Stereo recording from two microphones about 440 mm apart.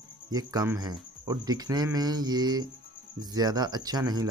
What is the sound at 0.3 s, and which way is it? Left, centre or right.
Speech, centre.